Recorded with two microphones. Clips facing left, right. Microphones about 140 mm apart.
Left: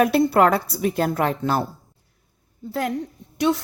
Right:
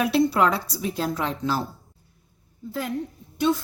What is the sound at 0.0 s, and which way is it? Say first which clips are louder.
A woman's voice: left 4 dB; 50° left (ahead or behind).